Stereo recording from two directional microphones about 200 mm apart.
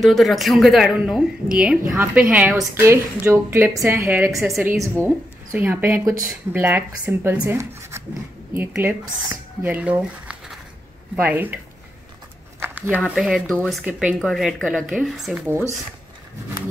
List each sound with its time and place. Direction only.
0.0 s a woman's voice: centre (ahead or behind)
4.4 s a woman's voice: centre (ahead or behind)
4.6 s speech: 10° right (ahead or behind)
12.5 s a sound: 10° right (ahead or behind)
13.0 s a woman's voice: centre (ahead or behind)